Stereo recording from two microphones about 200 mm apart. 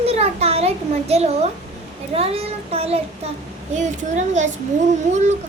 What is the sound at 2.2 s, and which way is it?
Child singing, 30° right (ahead or behind).